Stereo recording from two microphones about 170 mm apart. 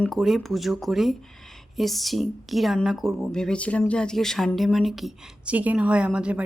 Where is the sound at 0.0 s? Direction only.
Centre (ahead or behind).